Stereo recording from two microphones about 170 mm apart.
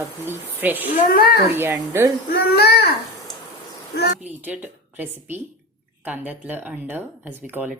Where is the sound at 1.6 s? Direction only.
15° right (ahead or behind).